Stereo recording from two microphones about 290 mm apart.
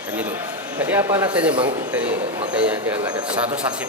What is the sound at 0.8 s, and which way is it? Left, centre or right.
A man's voice, centre.